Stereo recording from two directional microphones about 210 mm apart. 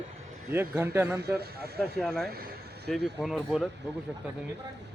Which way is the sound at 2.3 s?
45° right (ahead or behind).